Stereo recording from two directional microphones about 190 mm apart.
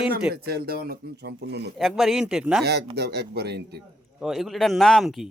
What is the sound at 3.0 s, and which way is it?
Speech, 60° right (ahead or behind).